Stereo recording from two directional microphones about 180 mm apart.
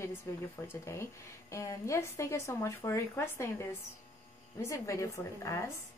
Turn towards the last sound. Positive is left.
turn(degrees=15)  # may be behind; listen again after turning